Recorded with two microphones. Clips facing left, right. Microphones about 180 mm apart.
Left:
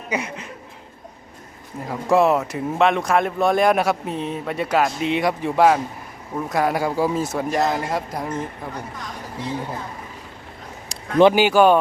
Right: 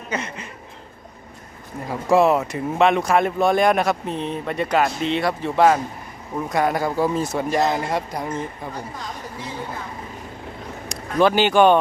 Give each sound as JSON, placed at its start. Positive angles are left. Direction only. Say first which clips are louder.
{"t": 0.1, "sound": "speech", "louder": "left 2 dB", "side_deg": 10}
{"t": 1.9, "sound": "speech", "louder": "right 1 dB", "side_deg": 0}
{"t": 11.2, "sound": "speech", "louder": "left 3 dB", "side_deg": 20}
{"t": 11.4, "sound": "speech", "louder": "even", "side_deg": 5}